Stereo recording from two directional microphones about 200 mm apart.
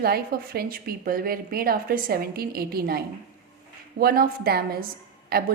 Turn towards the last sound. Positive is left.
turn(degrees=-50)  # may be behind; listen again after turning